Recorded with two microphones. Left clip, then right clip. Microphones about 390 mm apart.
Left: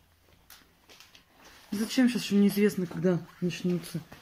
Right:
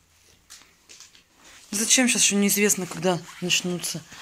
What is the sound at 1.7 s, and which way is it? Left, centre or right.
Speech, centre.